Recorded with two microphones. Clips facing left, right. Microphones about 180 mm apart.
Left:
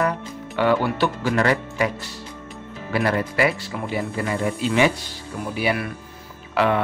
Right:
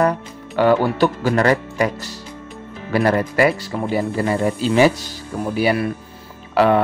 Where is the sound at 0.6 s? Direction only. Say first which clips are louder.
Right 5 dB; 40° right (ahead or behind).